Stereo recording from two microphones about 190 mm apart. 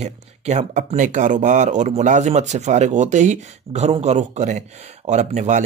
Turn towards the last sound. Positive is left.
turn(degrees=-40)  # may be behind; listen again after turning